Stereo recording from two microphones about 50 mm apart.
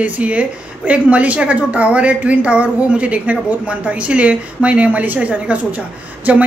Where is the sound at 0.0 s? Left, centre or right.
Right.